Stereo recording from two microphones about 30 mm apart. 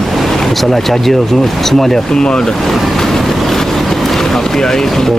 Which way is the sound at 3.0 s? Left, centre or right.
Centre.